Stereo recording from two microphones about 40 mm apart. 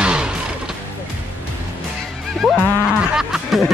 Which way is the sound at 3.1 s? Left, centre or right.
Centre.